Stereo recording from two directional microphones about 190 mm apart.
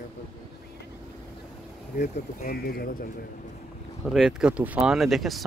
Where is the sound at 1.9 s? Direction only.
50° left (ahead or behind).